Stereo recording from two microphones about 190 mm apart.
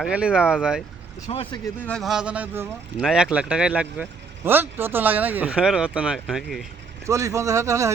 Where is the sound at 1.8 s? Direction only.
Centre (ahead or behind).